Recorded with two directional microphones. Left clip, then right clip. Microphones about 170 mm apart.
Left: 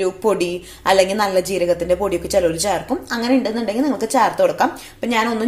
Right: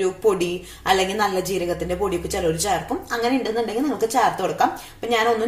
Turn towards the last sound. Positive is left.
turn(degrees=45)  # may be behind; listen again after turning